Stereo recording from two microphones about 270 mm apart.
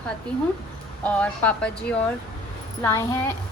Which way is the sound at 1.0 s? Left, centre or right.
Centre.